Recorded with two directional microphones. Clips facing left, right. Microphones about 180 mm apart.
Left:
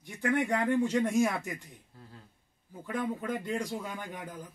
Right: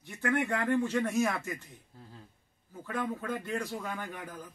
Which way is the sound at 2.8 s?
15° left (ahead or behind).